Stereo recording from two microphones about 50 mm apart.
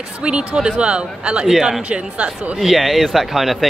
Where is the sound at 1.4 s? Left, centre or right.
Centre.